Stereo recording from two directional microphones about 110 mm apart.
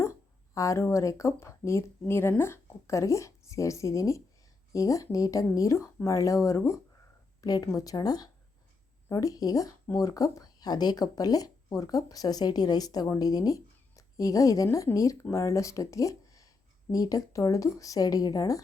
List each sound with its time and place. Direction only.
0.0 s speech: 30° left (ahead or behind)